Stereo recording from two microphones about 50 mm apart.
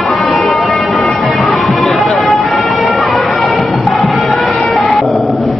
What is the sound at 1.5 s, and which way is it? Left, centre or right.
Music, centre.